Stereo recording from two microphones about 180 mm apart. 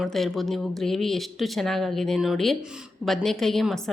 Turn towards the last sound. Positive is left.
turn(degrees=0)  # may be behind; listen again after turning